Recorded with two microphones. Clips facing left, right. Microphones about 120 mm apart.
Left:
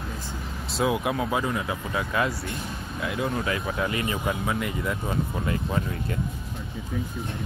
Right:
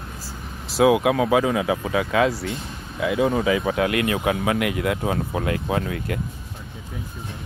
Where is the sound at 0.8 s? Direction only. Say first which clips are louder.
Right 8 dB; 90° right; by 6.1 s 70° right (ahead or behind).